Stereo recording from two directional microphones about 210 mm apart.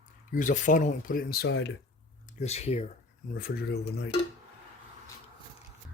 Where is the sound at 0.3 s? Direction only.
40° left (ahead or behind); by 1.7 s 55° left (ahead or behind).